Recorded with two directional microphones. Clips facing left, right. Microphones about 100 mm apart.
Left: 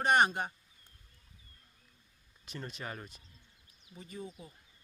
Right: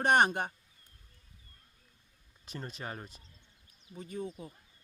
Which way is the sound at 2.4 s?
35° right (ahead or behind).